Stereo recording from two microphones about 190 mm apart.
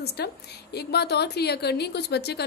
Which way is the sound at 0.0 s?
55° left (ahead or behind).